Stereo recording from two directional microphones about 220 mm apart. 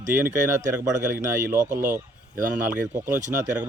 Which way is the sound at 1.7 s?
35° right (ahead or behind).